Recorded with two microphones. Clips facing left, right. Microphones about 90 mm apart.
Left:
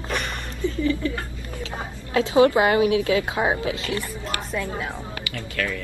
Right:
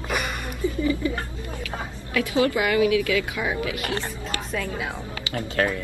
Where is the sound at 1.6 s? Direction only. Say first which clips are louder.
Even; 25° left (ahead or behind).